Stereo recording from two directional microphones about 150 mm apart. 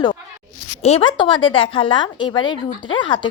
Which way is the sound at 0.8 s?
45° left (ahead or behind).